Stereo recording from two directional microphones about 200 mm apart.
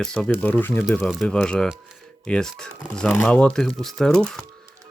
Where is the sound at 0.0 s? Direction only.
5° left (ahead or behind).